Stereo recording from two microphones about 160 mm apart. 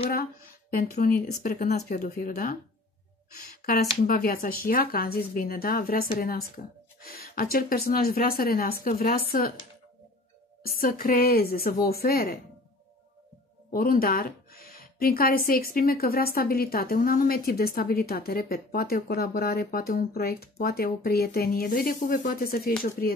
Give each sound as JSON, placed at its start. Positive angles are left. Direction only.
{"t": 0.1, "sound": "a sound", "side_deg": 65}
{"t": 0.9, "sound": "speech", "side_deg": 55}
{"t": 10.6, "sound": "speech", "side_deg": 65}
{"t": 13.7, "sound": "speech", "side_deg": 65}